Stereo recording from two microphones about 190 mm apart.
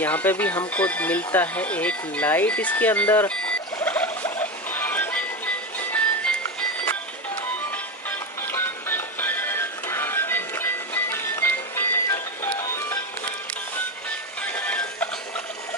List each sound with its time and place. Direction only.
0.0 s speech: 10° left (ahead or behind)
5.8 s music: 10° left (ahead or behind)
8.1 s music: 10° left (ahead or behind)
14.4 s music: 5° left (ahead or behind)